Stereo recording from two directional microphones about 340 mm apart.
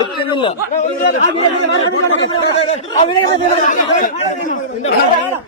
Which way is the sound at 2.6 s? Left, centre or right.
Centre.